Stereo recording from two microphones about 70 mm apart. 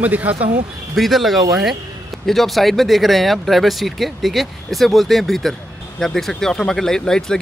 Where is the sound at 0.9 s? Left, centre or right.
Centre.